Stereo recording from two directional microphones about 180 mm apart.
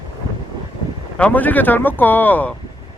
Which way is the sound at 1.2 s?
10° left (ahead or behind).